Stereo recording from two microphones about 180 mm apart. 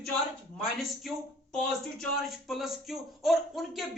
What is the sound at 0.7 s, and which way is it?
Speech, centre (ahead or behind).